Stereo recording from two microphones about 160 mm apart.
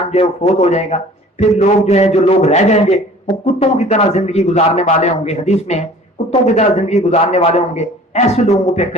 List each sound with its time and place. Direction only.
0.0 s speech: 45° left (ahead or behind)